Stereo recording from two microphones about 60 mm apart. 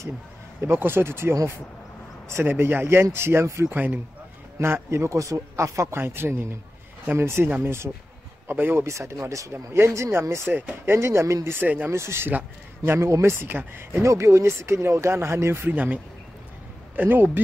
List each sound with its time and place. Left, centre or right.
0.6 s speech: right
2.4 s speech: right
3.7 s speech: right
4.6 s speech: right
5.9 s speech: right
8.8 s speech: right
9.5 s speech: right
11.6 s speech: right
11.9 s speech: right
14.0 s speech: right
15.7 s speech: right